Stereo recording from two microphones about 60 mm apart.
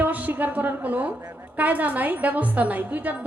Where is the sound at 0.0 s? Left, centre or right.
Right.